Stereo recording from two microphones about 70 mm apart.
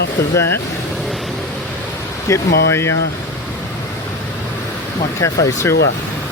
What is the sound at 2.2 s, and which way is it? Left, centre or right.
Speech, left.